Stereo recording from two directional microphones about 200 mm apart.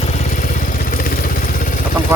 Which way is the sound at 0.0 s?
35° left (ahead or behind).